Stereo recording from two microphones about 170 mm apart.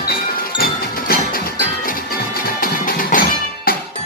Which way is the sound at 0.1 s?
65° left (ahead or behind).